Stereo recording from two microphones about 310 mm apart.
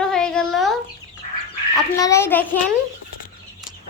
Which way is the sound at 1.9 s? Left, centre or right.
Centre.